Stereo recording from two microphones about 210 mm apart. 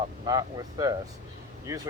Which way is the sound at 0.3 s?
15° right (ahead or behind).